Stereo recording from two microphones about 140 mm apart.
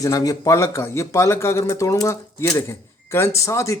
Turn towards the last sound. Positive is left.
turn(degrees=20)  # may be behind; listen again after turning